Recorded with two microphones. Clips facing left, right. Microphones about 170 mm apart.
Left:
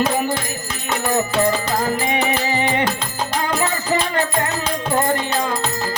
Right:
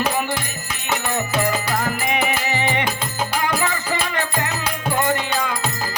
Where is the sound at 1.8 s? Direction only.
30° left (ahead or behind).